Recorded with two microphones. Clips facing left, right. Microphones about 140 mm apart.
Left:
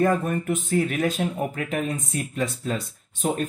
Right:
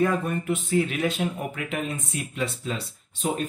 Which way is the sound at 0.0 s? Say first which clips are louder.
Left 2 dB; 45° left (ahead or behind).